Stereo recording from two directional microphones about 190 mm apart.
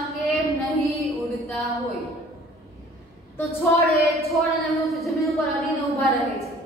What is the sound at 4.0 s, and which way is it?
A woman's voice, centre (ahead or behind).